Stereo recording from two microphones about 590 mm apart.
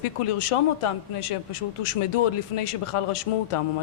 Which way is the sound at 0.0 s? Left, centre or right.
Left.